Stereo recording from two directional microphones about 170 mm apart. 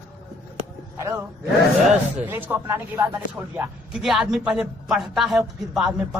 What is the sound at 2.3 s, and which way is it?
Speech, 10° right (ahead or behind).